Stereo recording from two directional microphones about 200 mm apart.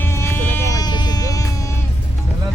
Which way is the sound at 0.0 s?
15° left (ahead or behind).